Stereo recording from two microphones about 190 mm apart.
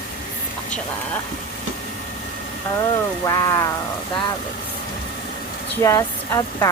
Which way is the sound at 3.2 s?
15° left (ahead or behind).